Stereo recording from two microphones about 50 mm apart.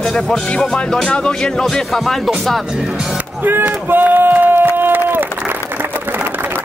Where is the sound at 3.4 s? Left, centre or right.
Right.